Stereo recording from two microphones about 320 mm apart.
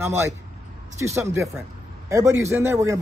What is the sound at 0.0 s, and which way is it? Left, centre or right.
Speech, centre.